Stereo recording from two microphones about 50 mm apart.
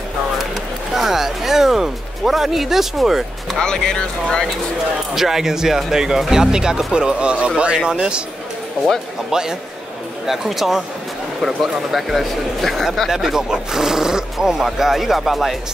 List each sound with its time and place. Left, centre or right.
0.9 s speech: centre
3.5 s speech: centre
5.1 s speech: centre
9.3 s speech: centre